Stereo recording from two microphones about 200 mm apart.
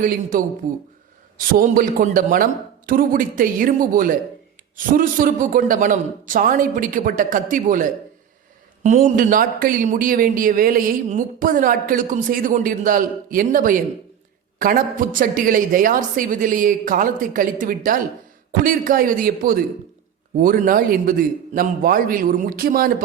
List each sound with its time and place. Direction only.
0.0 s a man's voice: 40° right (ahead or behind)